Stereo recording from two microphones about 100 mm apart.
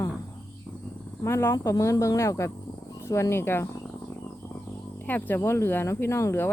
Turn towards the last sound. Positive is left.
turn(degrees=25)  # may be behind; listen again after turning